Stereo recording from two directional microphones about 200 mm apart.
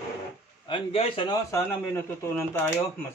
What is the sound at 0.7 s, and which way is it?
Speech, 25° left (ahead or behind).